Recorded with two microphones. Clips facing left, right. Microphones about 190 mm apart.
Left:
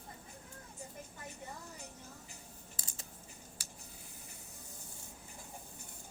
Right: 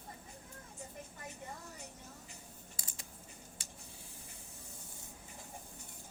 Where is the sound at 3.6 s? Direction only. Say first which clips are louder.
Even; 25° right (ahead or behind).